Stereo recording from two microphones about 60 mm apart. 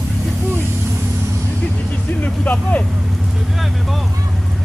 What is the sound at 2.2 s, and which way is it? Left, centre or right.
Vehicle, left.